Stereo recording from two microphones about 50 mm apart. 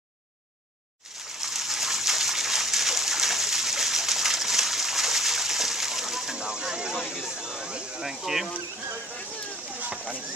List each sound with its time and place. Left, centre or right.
1.4 s water: centre
7.1 s a sound: centre
9.8 s rowboat: right